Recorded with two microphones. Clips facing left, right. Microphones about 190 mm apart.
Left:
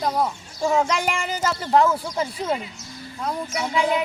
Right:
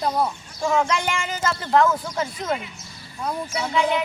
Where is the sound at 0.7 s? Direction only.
35° left (ahead or behind).